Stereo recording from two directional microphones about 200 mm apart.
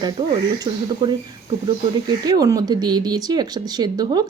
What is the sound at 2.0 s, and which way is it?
Speech, 20° right (ahead or behind).